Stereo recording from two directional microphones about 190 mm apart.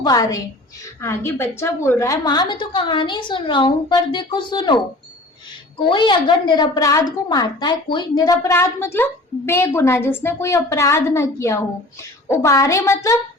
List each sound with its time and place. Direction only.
0.0 s a woman's voice: 20° left (ahead or behind)